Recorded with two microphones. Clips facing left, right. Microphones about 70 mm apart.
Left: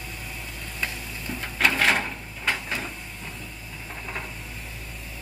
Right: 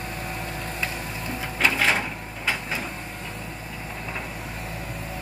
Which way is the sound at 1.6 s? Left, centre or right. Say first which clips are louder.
Even; centre.